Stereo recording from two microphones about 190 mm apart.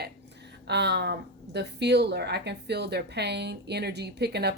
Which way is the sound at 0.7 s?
65° right (ahead or behind).